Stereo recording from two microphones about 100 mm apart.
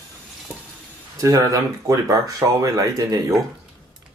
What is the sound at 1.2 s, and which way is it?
Speech, 35° right (ahead or behind).